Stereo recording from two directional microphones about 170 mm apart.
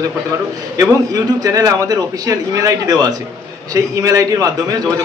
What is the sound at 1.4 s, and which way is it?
Speech, 20° right (ahead or behind).